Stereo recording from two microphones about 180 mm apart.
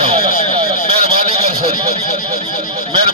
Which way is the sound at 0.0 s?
35° right (ahead or behind).